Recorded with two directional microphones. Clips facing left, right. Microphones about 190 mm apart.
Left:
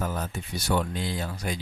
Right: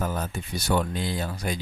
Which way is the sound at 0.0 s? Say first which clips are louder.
Right 2 dB; 45° right (ahead or behind).